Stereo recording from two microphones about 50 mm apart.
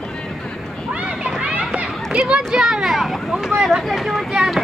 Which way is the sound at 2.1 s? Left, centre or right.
Centre.